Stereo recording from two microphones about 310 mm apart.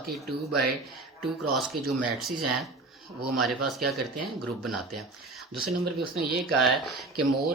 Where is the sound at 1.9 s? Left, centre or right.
Centre.